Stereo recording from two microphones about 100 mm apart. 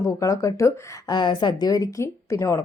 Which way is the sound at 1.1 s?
50° left (ahead or behind).